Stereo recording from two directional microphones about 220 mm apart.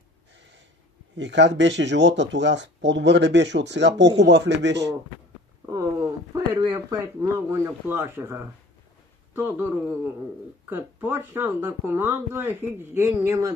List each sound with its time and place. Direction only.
1.1 s speech: 55° right (ahead or behind)
5.7 s speech: 15° right (ahead or behind)